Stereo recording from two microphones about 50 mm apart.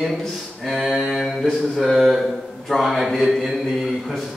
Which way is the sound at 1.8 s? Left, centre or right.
Centre.